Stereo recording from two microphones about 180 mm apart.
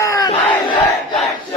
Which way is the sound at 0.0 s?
20° left (ahead or behind).